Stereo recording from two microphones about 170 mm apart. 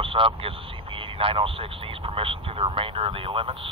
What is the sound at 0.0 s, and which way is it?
Speech, 30° right (ahead or behind).